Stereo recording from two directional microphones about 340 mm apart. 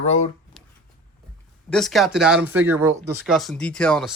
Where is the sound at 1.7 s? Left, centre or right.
Centre.